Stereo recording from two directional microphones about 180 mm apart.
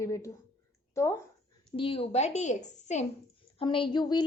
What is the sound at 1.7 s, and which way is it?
A woman's voice, 30° left (ahead or behind).